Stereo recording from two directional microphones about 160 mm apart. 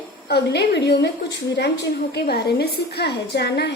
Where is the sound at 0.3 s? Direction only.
90° left.